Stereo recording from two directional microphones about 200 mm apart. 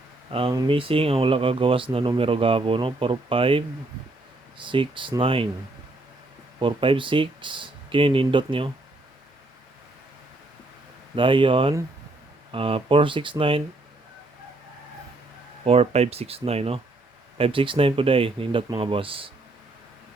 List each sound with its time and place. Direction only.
0.3 s speech: 25° right (ahead or behind)
6.6 s speech: 25° right (ahead or behind)
11.1 s speech: 25° right (ahead or behind)
15.6 s speech: 30° right (ahead or behind)